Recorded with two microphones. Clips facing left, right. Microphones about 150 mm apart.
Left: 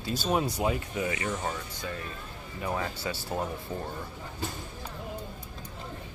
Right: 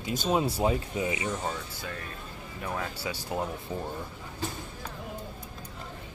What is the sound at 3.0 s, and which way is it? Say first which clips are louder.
Speech: even; 10° right (ahead or behind).